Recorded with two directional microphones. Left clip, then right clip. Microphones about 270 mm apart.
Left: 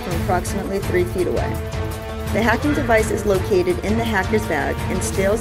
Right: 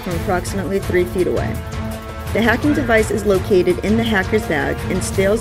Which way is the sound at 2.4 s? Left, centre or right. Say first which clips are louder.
Right 2 dB; centre.